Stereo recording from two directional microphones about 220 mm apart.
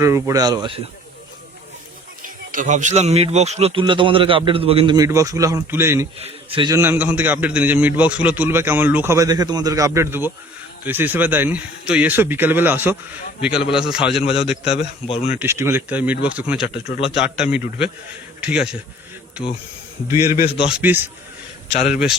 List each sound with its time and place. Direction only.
0.0 s a man's voice: 15° right (ahead or behind)
2.2 s speech: 35° right (ahead or behind); by 6.1 s 10° right (ahead or behind)
6.1 s a man's voice: 25° right (ahead or behind); by 14.1 s 5° right (ahead or behind)
14.1 s speech: 25° left (ahead or behind)
15.4 s a man's voice: 10° right (ahead or behind)
20.2 s a man's voice: 35° left (ahead or behind)
20.7 s a man's voice: 5° right (ahead or behind)
21.7 s speech: 30° left (ahead or behind)